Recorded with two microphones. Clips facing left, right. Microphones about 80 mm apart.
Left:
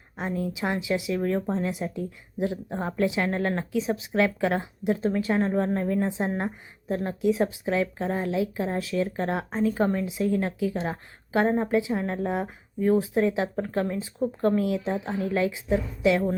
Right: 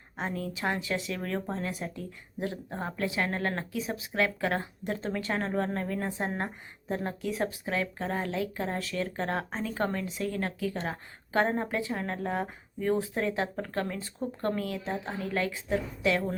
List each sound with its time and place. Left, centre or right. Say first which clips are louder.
0.3 s speech: left 4 dB; centre
4.8 s speech: left 8 dB; centre
6.9 s speech: left 4 dB; centre
7.2 s speech: left 8 dB; centre
13.1 s speech: left 6 dB; centre
13.7 s speech: left 5 dB; centre